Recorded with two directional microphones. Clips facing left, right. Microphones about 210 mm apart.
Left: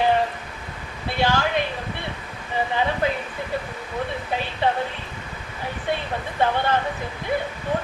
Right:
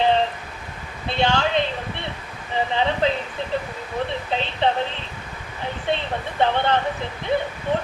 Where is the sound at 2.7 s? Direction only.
25° right (ahead or behind).